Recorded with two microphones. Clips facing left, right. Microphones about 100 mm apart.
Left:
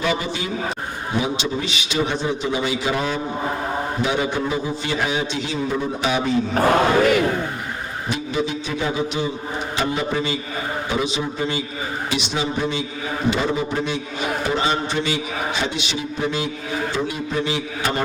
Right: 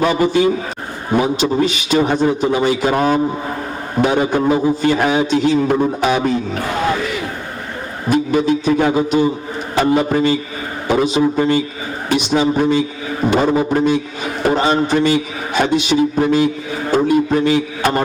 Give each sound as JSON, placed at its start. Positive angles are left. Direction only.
{"t": 0.0, "sound": "a man's voice", "side_deg": -45}
{"t": 8.1, "sound": "a man's voice", "side_deg": -45}